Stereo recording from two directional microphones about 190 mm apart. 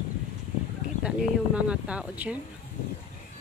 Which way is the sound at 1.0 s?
5° right (ahead or behind).